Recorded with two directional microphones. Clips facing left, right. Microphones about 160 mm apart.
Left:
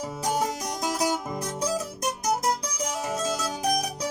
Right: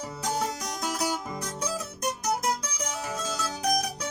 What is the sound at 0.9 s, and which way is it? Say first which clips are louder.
Music: left 4 dB; 15° left (ahead or behind).